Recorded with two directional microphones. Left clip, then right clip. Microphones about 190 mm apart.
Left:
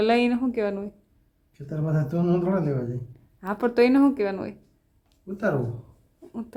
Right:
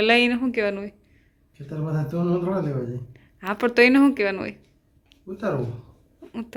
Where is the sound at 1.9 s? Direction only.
25° left (ahead or behind).